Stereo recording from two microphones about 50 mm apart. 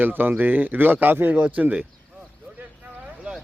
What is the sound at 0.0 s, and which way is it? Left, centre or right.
Speech, right.